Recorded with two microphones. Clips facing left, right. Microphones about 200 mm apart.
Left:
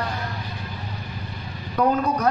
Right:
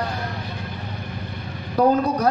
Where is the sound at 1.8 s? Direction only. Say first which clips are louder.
Right 3 dB; 35° right (ahead or behind).